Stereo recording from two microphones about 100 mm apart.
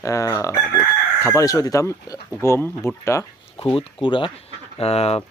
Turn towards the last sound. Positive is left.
turn(degrees=90)